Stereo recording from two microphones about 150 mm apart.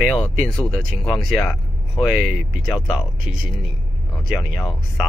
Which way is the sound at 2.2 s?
65° right (ahead or behind).